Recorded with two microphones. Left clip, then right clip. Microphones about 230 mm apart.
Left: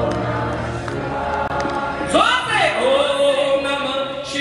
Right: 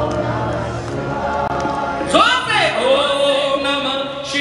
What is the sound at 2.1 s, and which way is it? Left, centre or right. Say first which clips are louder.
Music: right 2 dB; centre.